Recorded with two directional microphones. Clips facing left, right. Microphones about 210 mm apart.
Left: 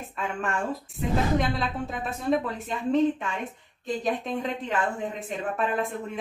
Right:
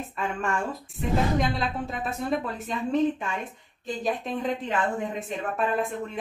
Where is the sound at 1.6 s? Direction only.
Centre (ahead or behind).